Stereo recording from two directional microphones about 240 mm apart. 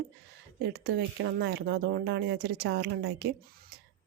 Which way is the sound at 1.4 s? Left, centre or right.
Right.